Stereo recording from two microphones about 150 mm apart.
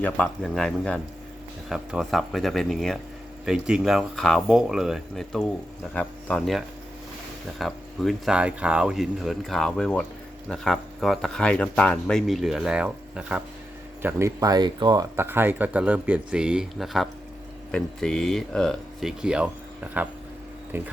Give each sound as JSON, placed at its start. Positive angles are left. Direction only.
{"t": 0.0, "sound": "speech", "side_deg": 5}
{"t": 14.0, "sound": "speech", "side_deg": -20}
{"t": 15.1, "sound": "speech", "side_deg": -15}